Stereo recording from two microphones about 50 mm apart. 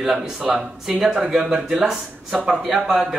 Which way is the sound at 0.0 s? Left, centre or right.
Centre.